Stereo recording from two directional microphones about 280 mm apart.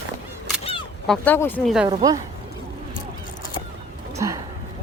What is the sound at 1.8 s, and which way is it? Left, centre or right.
Speech, centre.